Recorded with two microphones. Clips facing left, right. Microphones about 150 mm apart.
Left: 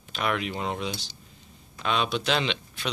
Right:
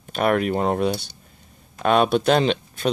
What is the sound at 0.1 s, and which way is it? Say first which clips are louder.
Speech: right 9 dB; 50° right (ahead or behind).